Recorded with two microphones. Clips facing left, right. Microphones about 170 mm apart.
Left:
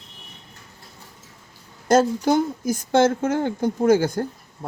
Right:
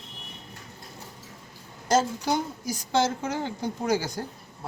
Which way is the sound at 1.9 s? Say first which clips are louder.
Left 6 dB; 55° left (ahead or behind).